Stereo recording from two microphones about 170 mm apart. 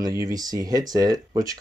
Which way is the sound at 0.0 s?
20° right (ahead or behind).